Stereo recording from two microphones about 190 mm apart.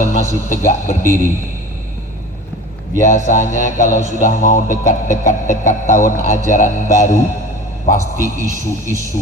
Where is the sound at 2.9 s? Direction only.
40° left (ahead or behind).